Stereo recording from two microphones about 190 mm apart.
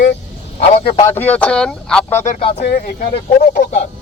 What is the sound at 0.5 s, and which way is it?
Speech, 30° left (ahead or behind).